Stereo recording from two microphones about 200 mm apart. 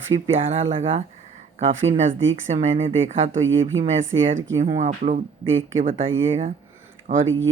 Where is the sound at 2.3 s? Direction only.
35° right (ahead or behind).